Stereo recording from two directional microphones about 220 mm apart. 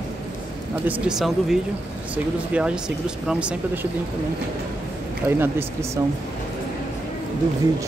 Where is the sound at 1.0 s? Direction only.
Centre (ahead or behind).